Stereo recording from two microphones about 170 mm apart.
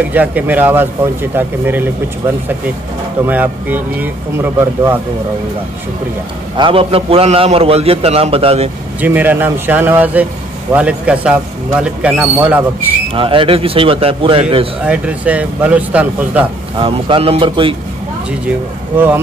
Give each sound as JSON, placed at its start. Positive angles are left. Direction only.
{"t": 0.1, "sound": "a man's voice", "side_deg": -10}
{"t": 6.5, "sound": "a man's voice", "side_deg": -30}
{"t": 9.0, "sound": "a man's voice", "side_deg": -10}
{"t": 13.1, "sound": "a man's voice", "side_deg": -30}
{"t": 14.9, "sound": "a man's voice", "side_deg": -10}
{"t": 16.8, "sound": "a man's voice", "side_deg": -35}
{"t": 18.9, "sound": "a man's voice", "side_deg": -10}